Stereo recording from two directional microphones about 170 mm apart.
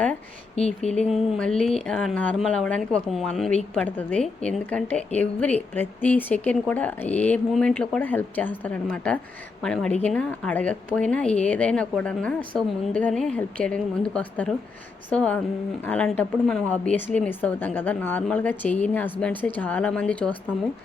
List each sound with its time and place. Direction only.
0.5 s speech: 40° left (ahead or behind)
1.1 s a woman's voice: centre (ahead or behind)